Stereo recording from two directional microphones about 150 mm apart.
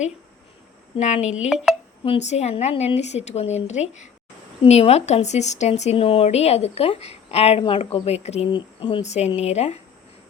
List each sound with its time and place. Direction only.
0.9 s speech: 50° left (ahead or behind)
1.4 s speech: centre (ahead or behind)
2.0 s speech: 50° left (ahead or behind)
8.4 s speech: 35° left (ahead or behind)